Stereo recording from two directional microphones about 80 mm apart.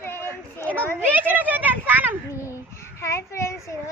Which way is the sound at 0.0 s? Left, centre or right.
Left.